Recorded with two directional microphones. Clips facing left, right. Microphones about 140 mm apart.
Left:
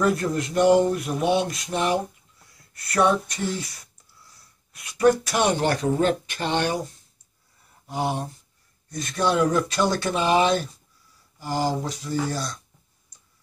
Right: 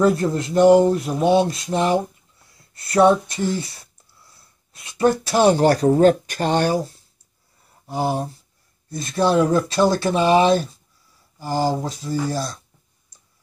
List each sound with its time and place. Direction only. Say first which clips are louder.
0.0 s speech: right 5 dB; 30° right (ahead or behind)
8.1 s speech: right 5 dB; 35° right (ahead or behind)